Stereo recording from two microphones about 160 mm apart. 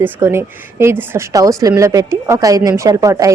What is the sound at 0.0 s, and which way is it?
A woman's voice, 15° right (ahead or behind).